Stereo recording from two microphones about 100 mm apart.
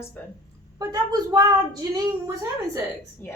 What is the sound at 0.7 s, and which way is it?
Speech, 40° right (ahead or behind).